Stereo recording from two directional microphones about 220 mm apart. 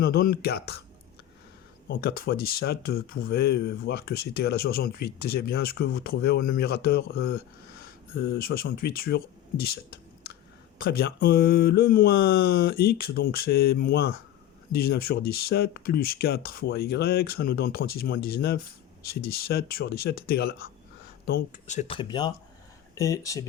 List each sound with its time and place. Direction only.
0.0 s speech: 45° left (ahead or behind)
1.9 s speech: 45° left (ahead or behind); by 23.5 s 15° left (ahead or behind)